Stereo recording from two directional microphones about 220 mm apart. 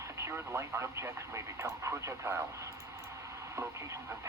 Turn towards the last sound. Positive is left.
turn(degrees=-15)  # may be behind; listen again after turning